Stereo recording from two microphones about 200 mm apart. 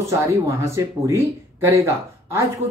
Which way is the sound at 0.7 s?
15° right (ahead or behind).